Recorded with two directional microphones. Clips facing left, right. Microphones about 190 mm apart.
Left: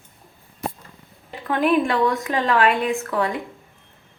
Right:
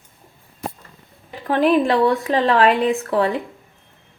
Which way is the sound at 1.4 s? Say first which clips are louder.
Right 3 dB; 35° right (ahead or behind).